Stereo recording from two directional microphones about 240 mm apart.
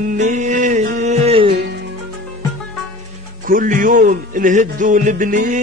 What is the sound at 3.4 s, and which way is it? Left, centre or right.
A man's voice, right.